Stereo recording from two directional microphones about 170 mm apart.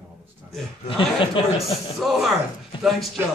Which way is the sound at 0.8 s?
30° left (ahead or behind).